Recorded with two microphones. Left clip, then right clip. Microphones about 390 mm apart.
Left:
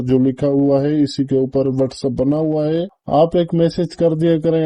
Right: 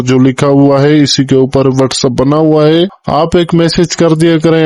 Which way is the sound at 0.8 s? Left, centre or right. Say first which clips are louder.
Right 10 dB; right.